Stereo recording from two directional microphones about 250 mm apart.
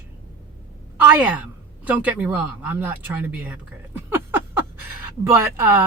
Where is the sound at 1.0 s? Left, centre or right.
Centre.